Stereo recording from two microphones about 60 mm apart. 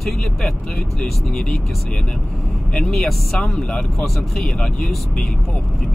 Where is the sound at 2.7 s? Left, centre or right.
Centre.